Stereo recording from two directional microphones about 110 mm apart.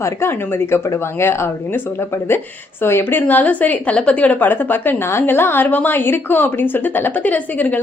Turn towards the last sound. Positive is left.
turn(degrees=15)  # may be behind; listen again after turning